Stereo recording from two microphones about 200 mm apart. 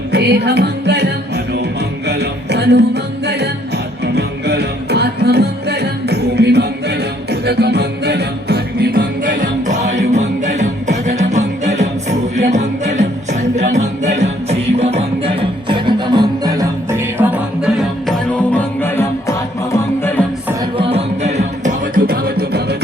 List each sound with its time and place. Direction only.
0.1 s music: 55° right (ahead or behind)
2.0 s music: 55° right (ahead or behind); by 17.8 s 5° right (ahead or behind)
18.5 s music: 10° left (ahead or behind)
20.7 s music: 30° right (ahead or behind); by 22.6 s 50° right (ahead or behind)